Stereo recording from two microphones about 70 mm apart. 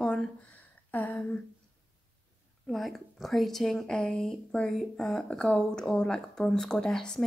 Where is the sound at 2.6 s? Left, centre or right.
Centre.